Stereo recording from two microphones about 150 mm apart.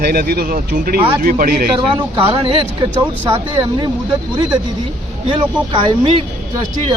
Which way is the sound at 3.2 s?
25° right (ahead or behind).